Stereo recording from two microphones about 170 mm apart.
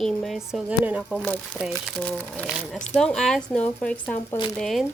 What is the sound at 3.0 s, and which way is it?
A woman's voice, 5° left (ahead or behind).